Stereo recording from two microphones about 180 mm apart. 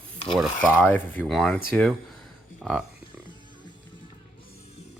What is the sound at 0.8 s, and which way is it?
Speech, 10° left (ahead or behind).